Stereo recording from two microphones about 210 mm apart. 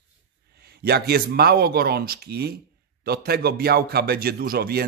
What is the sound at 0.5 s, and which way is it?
A man's voice, 50° right (ahead or behind).